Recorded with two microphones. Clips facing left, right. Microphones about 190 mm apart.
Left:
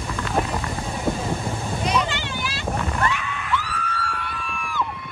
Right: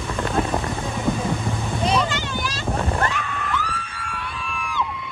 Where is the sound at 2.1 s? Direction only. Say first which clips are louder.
Right 2 dB; 45° right (ahead or behind).